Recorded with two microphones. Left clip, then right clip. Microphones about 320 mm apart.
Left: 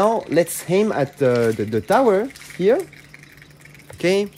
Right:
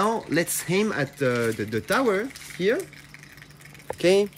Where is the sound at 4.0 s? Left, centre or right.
Left.